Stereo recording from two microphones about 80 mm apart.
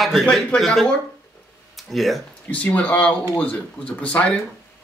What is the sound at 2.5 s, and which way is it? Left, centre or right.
Speech, centre.